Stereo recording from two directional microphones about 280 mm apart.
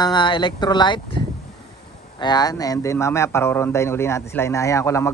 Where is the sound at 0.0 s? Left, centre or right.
Centre.